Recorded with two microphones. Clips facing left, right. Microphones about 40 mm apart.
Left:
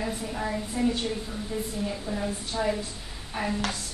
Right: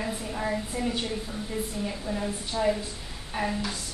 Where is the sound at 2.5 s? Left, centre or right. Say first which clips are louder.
Right 2 dB; right.